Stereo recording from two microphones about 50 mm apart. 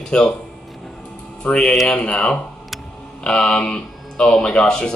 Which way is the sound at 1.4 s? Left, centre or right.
Left.